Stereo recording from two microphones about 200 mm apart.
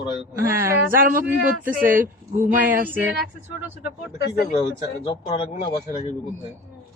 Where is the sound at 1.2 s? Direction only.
10° right (ahead or behind).